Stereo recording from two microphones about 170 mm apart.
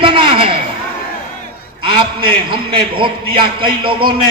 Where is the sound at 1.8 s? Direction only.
30° right (ahead or behind).